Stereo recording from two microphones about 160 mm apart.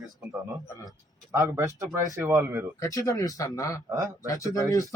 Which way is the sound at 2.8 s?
20° left (ahead or behind).